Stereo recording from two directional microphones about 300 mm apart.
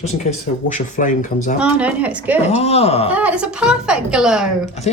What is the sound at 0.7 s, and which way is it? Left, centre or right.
Speech, left.